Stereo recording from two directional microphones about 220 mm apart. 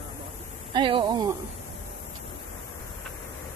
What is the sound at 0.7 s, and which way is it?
Speech, 20° right (ahead or behind).